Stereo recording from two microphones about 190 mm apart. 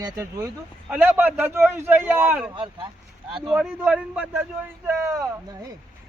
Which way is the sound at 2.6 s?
25° right (ahead or behind).